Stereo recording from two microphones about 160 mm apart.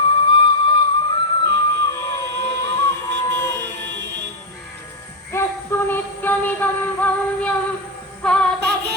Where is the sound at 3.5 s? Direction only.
90° right.